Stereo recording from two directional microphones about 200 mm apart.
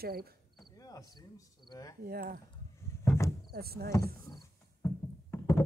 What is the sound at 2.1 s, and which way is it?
Speech, 50° right (ahead or behind).